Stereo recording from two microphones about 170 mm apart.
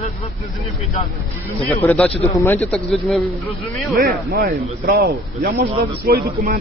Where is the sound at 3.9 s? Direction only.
65° right (ahead or behind).